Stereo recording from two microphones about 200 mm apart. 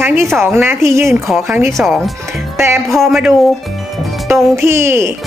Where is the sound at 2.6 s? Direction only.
10° right (ahead or behind).